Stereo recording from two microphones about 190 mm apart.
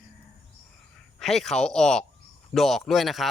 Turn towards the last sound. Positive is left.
turn(degrees=0)  # may be behind; listen again after turning